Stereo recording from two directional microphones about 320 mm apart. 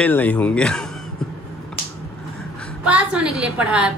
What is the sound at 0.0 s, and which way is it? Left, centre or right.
Speech, centre.